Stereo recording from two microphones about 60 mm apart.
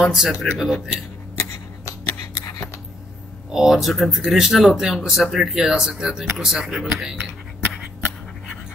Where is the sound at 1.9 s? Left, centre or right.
Left.